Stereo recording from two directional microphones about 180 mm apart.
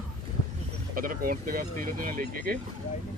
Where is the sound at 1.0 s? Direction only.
55° right (ahead or behind).